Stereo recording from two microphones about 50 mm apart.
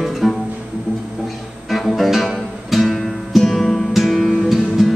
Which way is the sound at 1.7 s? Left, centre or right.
Centre.